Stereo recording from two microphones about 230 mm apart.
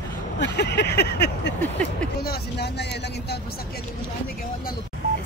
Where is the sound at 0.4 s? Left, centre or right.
Left.